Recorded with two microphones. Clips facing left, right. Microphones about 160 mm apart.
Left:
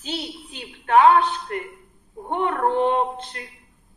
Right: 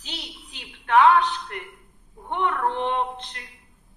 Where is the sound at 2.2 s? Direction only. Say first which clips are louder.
Left 3 dB; 40° left (ahead or behind).